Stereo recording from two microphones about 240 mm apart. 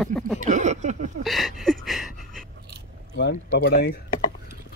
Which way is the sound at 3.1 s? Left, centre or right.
Left.